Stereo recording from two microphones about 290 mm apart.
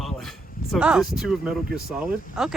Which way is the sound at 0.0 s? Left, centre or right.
Centre.